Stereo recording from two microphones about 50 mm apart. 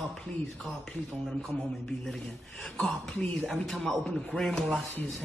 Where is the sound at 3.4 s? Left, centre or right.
Centre.